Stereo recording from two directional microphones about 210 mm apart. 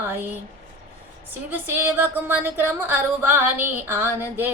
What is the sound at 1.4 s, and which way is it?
A woman's voice, 10° right (ahead or behind).